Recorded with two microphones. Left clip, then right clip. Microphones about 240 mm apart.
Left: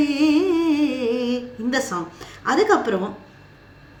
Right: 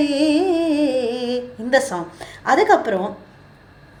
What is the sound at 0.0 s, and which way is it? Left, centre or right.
Music, centre.